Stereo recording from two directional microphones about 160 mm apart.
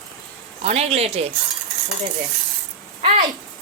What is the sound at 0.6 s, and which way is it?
Speech, 40° right (ahead or behind).